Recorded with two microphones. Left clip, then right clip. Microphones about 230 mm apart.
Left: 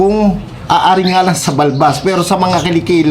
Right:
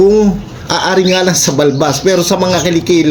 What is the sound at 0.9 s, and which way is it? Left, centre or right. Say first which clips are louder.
Speech: right 2 dB; centre.